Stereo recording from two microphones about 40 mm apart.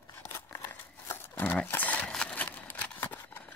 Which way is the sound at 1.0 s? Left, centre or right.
Left.